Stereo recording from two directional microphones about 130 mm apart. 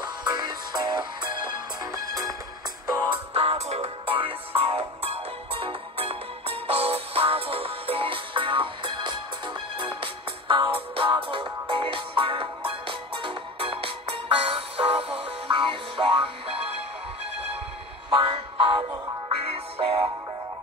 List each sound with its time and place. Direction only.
0.0 s music: 35° right (ahead or behind)
3.1 s music: 50° right (ahead or behind)
18.1 s music: 40° right (ahead or behind)
19.3 s music: 50° right (ahead or behind)